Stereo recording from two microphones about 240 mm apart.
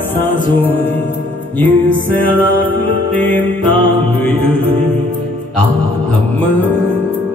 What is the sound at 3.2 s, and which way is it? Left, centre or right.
Mantra, centre.